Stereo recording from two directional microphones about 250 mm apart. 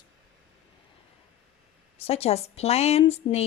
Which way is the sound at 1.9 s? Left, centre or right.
Left.